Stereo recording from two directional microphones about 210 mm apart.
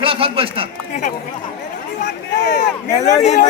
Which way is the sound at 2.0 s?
55° left (ahead or behind).